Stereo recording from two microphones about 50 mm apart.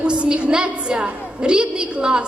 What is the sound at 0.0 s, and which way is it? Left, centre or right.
A woman's voice, right.